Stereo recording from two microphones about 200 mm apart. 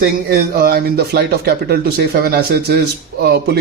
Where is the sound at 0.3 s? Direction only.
45° right (ahead or behind).